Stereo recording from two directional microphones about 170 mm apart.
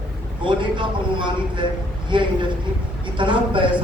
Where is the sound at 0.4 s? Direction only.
30° right (ahead or behind).